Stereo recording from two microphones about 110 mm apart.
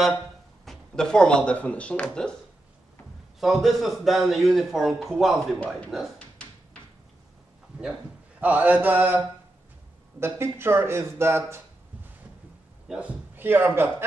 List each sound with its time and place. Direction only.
0.7 s speech: 5° left (ahead or behind)
3.3 s a man's voice: centre (ahead or behind)
6.1 s a sound: 10° left (ahead or behind)
8.4 s mantra: 15° right (ahead or behind)
10.2 s speech: 20° right (ahead or behind)
12.8 s a man's voice: 5° right (ahead or behind)
13.4 s speech: 20° right (ahead or behind)